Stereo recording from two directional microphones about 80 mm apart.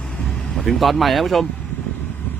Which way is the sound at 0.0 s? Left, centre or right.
Centre.